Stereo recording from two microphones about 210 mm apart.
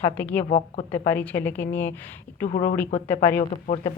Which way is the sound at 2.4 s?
35° left (ahead or behind).